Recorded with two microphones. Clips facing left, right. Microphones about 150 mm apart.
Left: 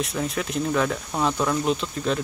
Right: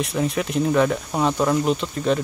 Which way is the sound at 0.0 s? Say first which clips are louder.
Right 4 dB; centre (ahead or behind).